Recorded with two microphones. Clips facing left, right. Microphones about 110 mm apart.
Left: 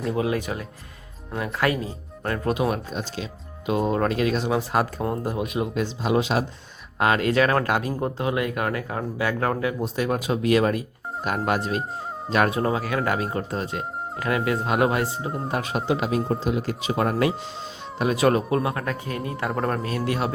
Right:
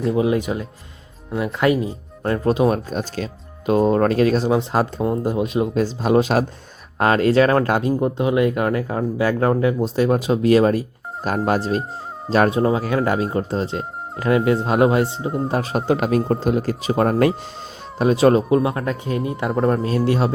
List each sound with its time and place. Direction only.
0.2 s speech: 20° right (ahead or behind); by 4.5 s 40° right (ahead or behind)
4.5 s speech: 25° right (ahead or behind)
5.3 s speech: 30° right (ahead or behind)
17.9 s speech: 30° right (ahead or behind)